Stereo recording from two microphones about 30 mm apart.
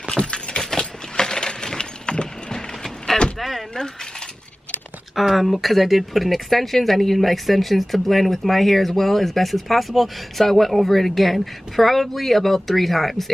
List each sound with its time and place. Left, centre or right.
0.6 s a sound: centre
2.1 s clip-clop: left
2.5 s clip-clop: centre
3.3 s door: centre
5.1 s speech: centre